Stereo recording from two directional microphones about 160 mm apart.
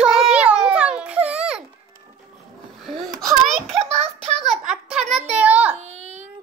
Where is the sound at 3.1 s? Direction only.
Centre (ahead or behind).